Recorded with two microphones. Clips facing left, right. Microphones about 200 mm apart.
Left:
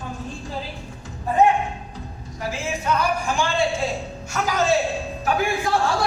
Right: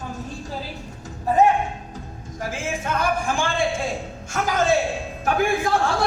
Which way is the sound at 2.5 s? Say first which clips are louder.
Left 2 dB; 50° right (ahead or behind).